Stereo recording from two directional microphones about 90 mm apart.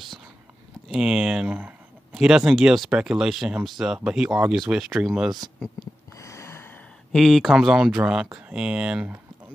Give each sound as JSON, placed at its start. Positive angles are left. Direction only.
{"t": 0.8, "sound": "speech", "side_deg": -5}
{"t": 6.1, "sound": "a sound", "side_deg": 35}
{"t": 7.1, "sound": "speech", "side_deg": 5}
{"t": 7.5, "sound": "speech", "side_deg": -5}